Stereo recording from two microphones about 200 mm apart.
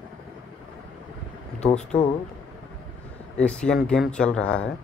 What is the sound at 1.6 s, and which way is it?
Speech, 35° left (ahead or behind).